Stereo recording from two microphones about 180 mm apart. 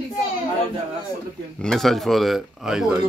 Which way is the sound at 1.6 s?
Centre (ahead or behind).